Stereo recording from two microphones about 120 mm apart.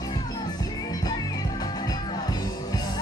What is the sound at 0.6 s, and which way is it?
Music, 35° left (ahead or behind).